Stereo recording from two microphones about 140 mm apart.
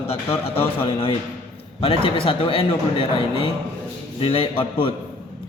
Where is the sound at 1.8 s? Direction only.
40° left (ahead or behind).